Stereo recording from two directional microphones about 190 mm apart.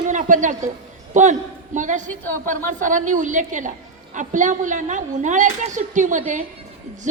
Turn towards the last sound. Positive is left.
turn(degrees=-40)  # may be behind; listen again after turning